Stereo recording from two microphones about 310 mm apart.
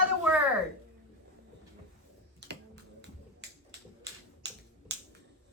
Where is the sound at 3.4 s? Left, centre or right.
Right.